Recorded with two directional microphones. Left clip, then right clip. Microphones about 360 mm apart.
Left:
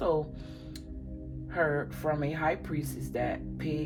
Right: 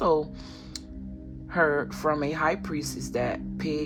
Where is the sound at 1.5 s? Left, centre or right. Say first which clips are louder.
Right 5 dB; right.